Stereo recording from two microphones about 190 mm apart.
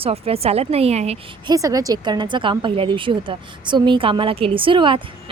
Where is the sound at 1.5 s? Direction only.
20° right (ahead or behind).